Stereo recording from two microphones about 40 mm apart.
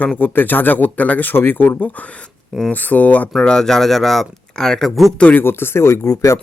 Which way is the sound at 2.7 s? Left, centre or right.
Left.